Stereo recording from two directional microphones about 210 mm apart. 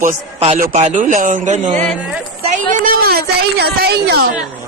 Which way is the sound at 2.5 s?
40° right (ahead or behind).